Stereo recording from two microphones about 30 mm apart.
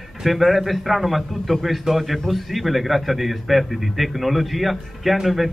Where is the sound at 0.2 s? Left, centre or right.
Centre.